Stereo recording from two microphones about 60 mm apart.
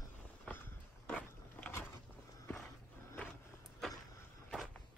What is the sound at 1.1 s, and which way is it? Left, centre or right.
Vehicle, left.